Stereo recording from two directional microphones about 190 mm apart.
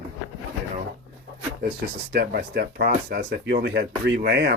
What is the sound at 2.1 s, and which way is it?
Speech, 50° right (ahead or behind).